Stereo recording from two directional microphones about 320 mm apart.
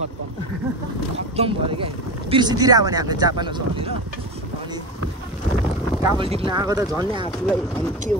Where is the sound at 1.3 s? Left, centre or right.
Centre.